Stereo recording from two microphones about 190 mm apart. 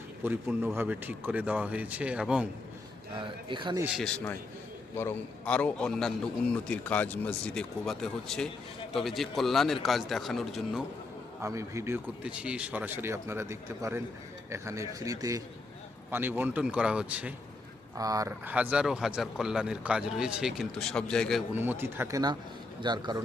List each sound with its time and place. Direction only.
0.3 s speech: 10° right (ahead or behind)
3.2 s speech: 25° right (ahead or behind)
3.9 s speech: 5° left (ahead or behind)
11.4 s speech: 15° right (ahead or behind)
17.9 s speech: 20° right (ahead or behind); by 21.4 s 5° left (ahead or behind)
21.5 s speech: 10° right (ahead or behind)